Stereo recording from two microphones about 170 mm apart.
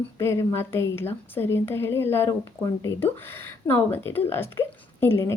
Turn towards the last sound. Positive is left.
turn(degrees=15)  # may be behind; listen again after turning